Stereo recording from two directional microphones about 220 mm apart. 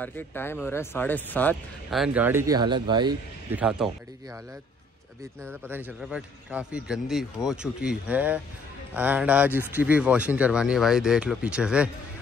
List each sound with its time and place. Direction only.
0.0 s speech: 10° left (ahead or behind); by 3.2 s 20° right (ahead or behind)
3.5 s speech: 5° right (ahead or behind)
5.5 s a man's voice: 10° right (ahead or behind)